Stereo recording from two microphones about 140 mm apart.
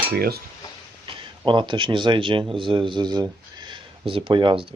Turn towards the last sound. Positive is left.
turn(degrees=-35)  # may be behind; listen again after turning